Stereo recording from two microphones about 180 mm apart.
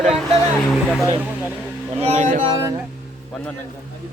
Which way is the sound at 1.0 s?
10° right (ahead or behind).